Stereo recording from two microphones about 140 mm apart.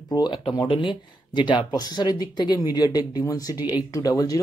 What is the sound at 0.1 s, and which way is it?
Speech, 30° left (ahead or behind).